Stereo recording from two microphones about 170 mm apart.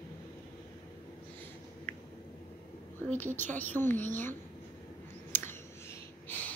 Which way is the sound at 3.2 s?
10° left (ahead or behind).